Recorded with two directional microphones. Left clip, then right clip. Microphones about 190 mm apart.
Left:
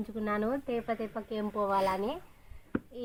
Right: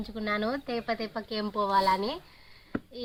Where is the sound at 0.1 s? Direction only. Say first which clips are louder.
Right 2 dB; 15° left (ahead or behind).